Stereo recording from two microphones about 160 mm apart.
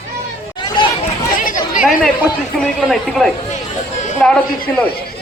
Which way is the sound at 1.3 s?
55° left (ahead or behind).